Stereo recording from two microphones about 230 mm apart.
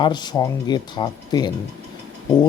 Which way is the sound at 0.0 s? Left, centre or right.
Centre.